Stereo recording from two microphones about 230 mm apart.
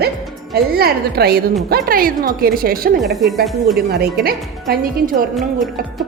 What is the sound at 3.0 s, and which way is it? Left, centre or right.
Speech, centre.